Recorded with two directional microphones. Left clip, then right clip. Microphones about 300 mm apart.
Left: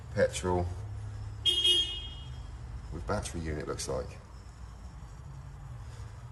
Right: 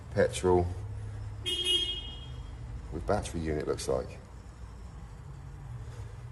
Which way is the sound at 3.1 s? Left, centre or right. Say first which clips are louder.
Right 4 dB; centre.